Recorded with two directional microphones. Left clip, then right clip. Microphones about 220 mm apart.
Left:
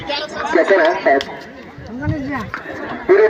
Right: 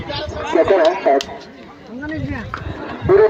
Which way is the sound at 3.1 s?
35° right (ahead or behind).